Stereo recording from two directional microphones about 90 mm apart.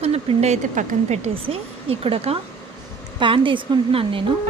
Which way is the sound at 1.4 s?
90° right.